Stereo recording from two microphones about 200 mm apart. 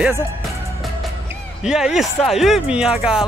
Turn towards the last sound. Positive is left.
turn(degrees=-5)  # may be behind; listen again after turning